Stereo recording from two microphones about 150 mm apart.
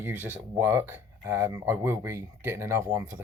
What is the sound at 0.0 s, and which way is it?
Speech, 15° right (ahead or behind).